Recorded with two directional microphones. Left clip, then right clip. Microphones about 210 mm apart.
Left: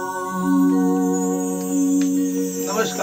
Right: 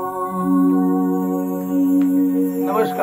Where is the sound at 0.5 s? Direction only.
40° left (ahead or behind).